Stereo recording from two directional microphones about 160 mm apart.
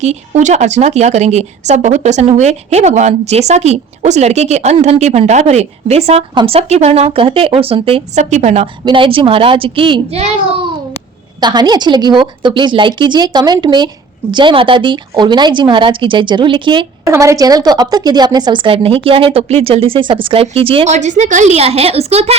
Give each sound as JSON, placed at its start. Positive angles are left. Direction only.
{"t": 0.0, "sound": "speech", "side_deg": -45}
{"t": 8.2, "sound": "speech", "side_deg": -45}
{"t": 8.8, "sound": "speech", "side_deg": -30}
{"t": 11.3, "sound": "a woman's voice", "side_deg": -25}
{"t": 17.1, "sound": "a woman's voice", "side_deg": -20}